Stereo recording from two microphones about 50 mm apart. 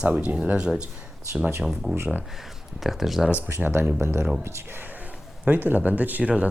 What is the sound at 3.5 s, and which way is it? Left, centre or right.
Speech, right.